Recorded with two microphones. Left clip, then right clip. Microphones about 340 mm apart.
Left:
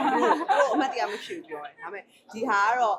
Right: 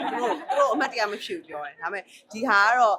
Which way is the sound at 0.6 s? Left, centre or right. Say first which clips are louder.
Right 1 dB; right.